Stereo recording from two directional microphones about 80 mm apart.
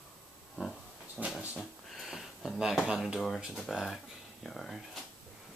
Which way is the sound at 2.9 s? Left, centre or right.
Centre.